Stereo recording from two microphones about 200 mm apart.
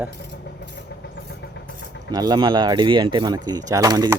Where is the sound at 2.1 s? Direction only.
20° right (ahead or behind).